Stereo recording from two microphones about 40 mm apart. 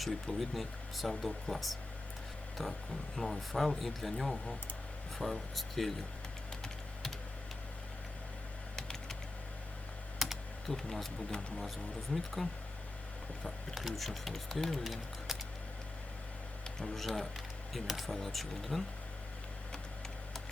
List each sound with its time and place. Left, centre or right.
0.0 s speech: centre
3.2 s speech: centre
8.7 s typing: centre
10.2 s computer keyboard: centre
10.7 s speech: centre
12.1 s speech: centre
13.7 s speech: centre
16.8 s speech: centre